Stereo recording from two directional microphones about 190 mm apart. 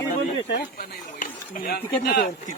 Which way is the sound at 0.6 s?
45° left (ahead or behind).